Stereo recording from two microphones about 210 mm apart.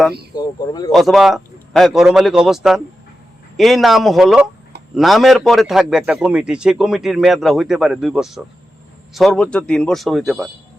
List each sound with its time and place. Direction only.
0.3 s speech: 20° left (ahead or behind)
0.9 s a man's voice: centre (ahead or behind)